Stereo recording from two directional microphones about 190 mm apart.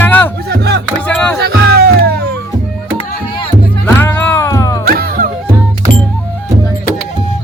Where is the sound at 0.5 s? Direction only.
60° right (ahead or behind).